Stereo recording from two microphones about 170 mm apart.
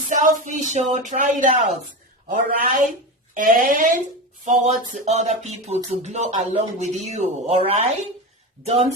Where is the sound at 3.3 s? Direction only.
55° right (ahead or behind).